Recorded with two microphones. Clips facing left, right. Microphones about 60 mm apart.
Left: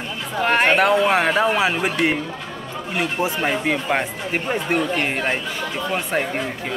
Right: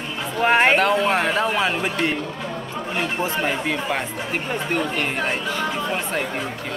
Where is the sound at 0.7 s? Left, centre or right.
Centre; by 5.4 s left.